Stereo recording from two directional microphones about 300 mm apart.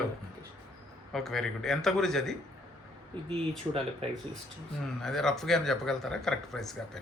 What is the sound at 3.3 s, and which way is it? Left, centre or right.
Speech, centre.